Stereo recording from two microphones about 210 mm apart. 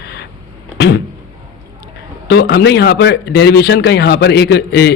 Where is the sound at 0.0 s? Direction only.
50° left (ahead or behind).